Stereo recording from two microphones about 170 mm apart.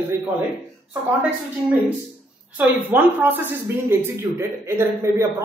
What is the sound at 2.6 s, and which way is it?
Speech, 10° right (ahead or behind).